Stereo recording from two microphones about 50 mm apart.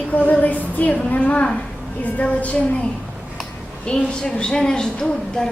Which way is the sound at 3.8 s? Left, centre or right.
Centre.